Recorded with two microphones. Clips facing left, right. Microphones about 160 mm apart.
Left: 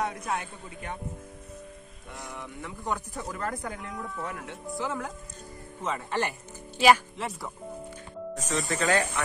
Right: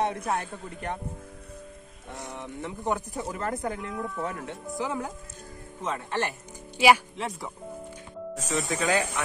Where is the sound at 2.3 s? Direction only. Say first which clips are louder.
Right 5 dB; 25° right (ahead or behind).